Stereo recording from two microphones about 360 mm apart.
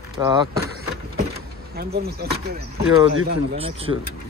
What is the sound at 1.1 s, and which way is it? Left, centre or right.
Vehicle, right.